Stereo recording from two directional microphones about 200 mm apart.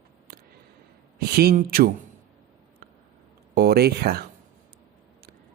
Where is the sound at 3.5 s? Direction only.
50° right (ahead or behind).